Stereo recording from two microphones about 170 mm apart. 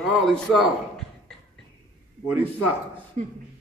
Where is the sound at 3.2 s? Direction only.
40° right (ahead or behind).